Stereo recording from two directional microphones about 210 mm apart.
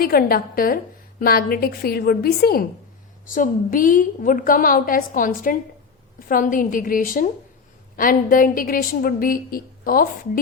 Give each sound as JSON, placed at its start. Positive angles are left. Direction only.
{"t": 0.0, "sound": "a woman's voice", "side_deg": 45}